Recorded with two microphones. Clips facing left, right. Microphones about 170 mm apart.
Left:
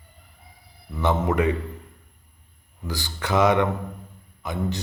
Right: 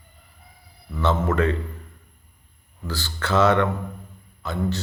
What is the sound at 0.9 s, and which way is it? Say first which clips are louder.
Speech: even; 15° left (ahead or behind).